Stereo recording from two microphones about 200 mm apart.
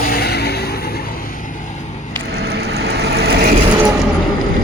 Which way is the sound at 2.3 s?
55° right (ahead or behind).